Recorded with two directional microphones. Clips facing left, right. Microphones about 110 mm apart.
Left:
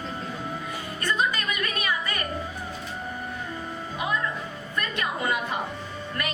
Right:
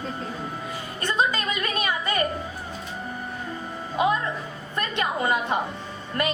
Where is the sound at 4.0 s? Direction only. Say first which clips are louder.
Right 6 dB; 25° right (ahead or behind).